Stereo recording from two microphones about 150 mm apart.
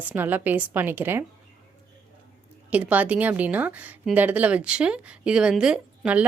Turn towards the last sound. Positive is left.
turn(degrees=-5)  # may be behind; listen again after turning